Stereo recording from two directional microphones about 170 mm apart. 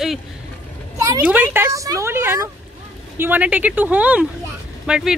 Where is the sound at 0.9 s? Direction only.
20° right (ahead or behind).